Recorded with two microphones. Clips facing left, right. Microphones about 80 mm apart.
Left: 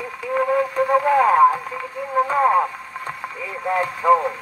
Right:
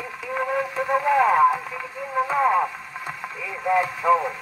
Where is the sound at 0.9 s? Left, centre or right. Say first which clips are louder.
Left 2 dB; centre.